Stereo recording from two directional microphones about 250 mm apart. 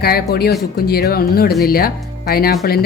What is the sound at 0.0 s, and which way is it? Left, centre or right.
A woman's voice, left.